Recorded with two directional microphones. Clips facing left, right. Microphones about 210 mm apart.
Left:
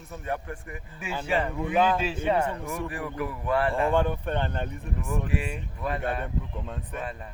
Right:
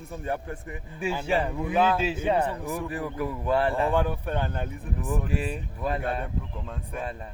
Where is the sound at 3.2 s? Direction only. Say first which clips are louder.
Right 1 dB; 25° right (ahead or behind).